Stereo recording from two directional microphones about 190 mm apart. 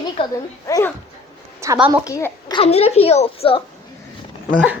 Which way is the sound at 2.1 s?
20° left (ahead or behind).